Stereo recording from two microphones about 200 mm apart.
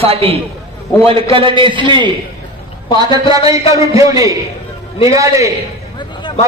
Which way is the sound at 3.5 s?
15° right (ahead or behind).